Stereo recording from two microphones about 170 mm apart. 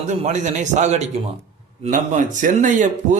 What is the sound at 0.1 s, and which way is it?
A man's voice, 40° right (ahead or behind).